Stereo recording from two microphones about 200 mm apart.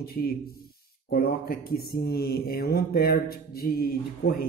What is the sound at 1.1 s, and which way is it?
Mantra, 50° left (ahead or behind).